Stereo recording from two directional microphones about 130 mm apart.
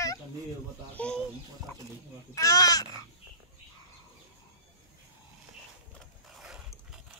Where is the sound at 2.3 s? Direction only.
30° left (ahead or behind).